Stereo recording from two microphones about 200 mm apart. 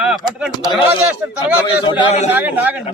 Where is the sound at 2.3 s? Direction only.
10° right (ahead or behind).